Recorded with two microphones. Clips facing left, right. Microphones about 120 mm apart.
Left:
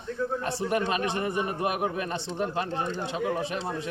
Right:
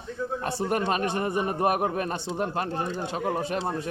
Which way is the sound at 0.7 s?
45° right (ahead or behind).